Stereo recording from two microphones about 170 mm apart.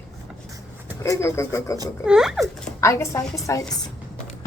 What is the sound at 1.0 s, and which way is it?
Speech, 15° left (ahead or behind).